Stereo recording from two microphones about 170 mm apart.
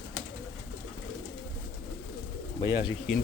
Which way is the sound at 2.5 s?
25° left (ahead or behind).